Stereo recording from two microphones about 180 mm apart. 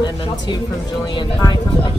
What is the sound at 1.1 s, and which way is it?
Speech, 25° left (ahead or behind).